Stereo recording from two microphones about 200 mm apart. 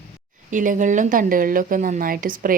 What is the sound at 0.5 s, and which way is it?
A woman's voice, 40° right (ahead or behind).